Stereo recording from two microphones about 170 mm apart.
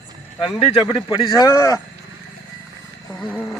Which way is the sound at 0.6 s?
30° left (ahead or behind).